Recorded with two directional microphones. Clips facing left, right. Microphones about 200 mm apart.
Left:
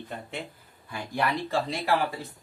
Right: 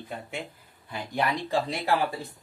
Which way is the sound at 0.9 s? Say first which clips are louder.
Even; 20° right (ahead or behind).